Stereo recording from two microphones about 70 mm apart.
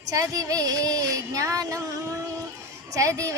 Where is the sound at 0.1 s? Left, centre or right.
Right.